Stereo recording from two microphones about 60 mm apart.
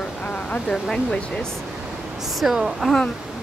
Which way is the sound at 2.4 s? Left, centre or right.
Centre.